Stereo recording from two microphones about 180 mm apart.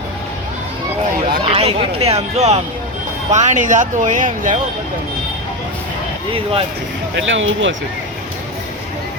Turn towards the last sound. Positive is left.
turn(degrees=-90)